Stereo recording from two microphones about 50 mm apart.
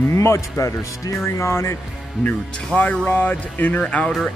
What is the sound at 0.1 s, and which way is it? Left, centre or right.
Speech, left.